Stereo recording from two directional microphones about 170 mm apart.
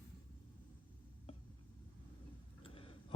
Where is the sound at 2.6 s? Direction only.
30° left (ahead or behind).